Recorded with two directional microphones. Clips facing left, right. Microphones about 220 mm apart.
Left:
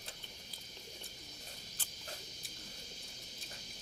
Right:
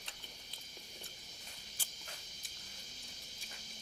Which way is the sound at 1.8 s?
10° right (ahead or behind).